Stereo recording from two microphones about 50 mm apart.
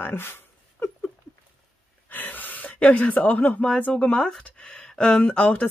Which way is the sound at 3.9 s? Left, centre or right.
Centre.